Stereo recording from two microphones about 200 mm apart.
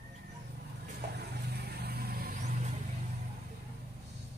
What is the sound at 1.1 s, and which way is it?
Vehicle, 55° right (ahead or behind).